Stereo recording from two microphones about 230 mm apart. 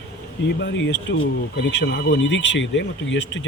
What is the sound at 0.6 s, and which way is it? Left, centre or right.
Speech, left.